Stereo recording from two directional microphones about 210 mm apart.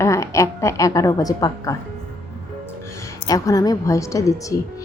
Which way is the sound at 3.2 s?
15° left (ahead or behind).